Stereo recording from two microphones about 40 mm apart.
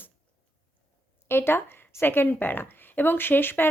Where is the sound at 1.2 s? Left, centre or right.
Left.